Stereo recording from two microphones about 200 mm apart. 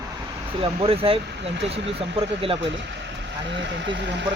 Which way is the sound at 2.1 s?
30° right (ahead or behind).